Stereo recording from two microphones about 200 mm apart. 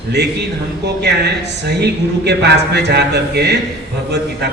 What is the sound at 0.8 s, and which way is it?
Speech, 55° right (ahead or behind).